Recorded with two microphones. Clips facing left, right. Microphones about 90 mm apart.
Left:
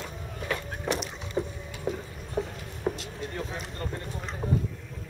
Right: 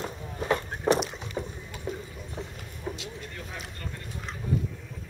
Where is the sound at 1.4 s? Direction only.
15° left (ahead or behind).